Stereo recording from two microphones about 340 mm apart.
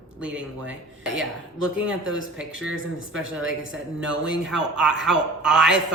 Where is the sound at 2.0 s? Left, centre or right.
Right.